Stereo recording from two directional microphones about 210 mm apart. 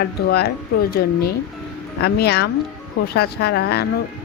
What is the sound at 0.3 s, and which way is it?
Speech, 50° left (ahead or behind).